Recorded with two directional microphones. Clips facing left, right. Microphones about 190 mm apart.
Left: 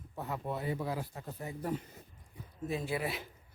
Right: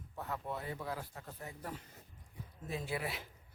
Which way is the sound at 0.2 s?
15° left (ahead or behind).